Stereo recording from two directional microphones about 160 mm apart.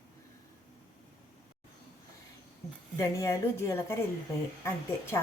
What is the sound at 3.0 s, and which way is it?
A woman's voice, 20° left (ahead or behind).